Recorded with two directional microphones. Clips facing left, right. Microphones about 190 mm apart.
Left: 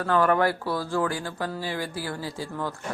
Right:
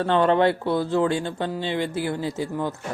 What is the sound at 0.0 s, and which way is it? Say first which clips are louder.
Speech: right 3 dB; 25° right (ahead or behind).